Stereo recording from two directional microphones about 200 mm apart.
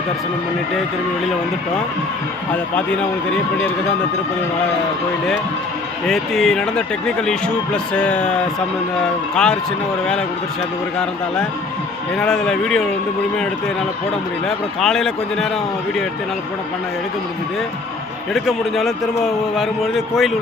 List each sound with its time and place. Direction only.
2.7 s a man's voice: 5° left (ahead or behind)
6.1 s a man's voice: centre (ahead or behind)
12.1 s a man's voice: 5° left (ahead or behind)
14.4 s a man's voice: centre (ahead or behind)
18.3 s a man's voice: centre (ahead or behind)